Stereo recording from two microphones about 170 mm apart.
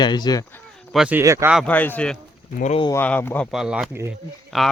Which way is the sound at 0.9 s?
5° right (ahead or behind).